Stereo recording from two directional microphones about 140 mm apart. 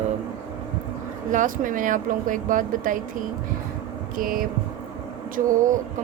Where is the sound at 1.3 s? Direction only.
70° right (ahead or behind).